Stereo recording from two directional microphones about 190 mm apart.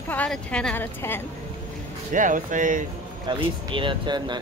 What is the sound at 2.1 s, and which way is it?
Speech, 45° right (ahead or behind).